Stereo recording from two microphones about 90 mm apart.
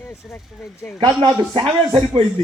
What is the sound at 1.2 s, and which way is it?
Speech, 60° right (ahead or behind).